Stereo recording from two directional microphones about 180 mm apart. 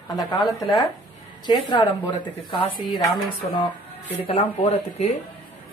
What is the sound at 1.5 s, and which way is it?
Speech, 25° left (ahead or behind).